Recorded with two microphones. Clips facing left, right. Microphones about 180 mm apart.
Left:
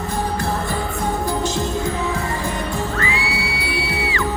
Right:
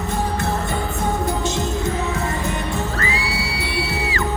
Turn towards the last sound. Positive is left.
turn(degrees=-40)  # may be behind; listen again after turning